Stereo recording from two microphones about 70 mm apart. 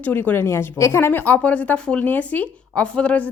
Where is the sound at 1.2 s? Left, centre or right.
Left.